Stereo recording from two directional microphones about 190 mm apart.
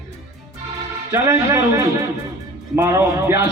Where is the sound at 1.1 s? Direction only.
15° right (ahead or behind).